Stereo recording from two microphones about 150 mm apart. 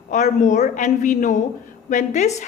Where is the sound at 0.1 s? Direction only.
55° left (ahead or behind).